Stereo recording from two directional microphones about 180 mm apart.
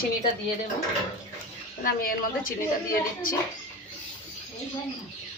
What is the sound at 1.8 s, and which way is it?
A woman's voice, 50° left (ahead or behind).